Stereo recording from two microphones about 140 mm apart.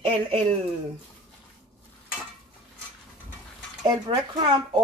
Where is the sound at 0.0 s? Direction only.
40° right (ahead or behind).